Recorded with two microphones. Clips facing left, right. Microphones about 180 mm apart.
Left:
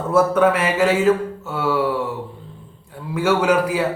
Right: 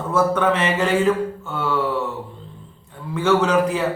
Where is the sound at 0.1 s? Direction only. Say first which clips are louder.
Left 3 dB; 10° left (ahead or behind).